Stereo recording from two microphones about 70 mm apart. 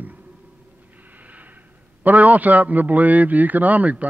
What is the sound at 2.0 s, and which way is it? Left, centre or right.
A man's voice, right.